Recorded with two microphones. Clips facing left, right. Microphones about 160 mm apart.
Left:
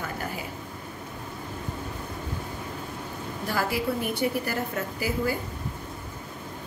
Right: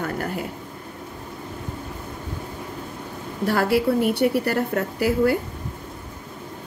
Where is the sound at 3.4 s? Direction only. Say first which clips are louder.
Right 8 dB; 70° right (ahead or behind).